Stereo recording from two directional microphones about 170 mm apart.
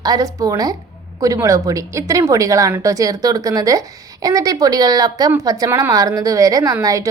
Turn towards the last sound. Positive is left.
turn(degrees=-20)  # may be behind; listen again after turning